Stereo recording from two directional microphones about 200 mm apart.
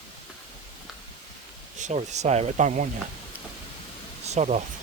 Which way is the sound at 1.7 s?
35° right (ahead or behind).